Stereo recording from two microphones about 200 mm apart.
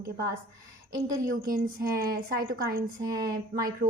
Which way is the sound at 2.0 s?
50° right (ahead or behind).